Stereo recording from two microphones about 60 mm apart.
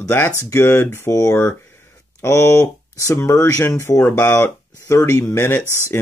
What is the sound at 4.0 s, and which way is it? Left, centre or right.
Speech, left.